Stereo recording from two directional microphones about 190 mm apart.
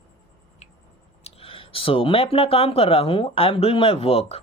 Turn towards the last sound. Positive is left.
turn(degrees=30)  # may be behind; listen again after turning